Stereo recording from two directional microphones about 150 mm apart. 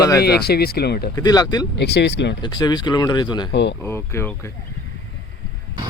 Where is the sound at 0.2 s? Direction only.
90° left.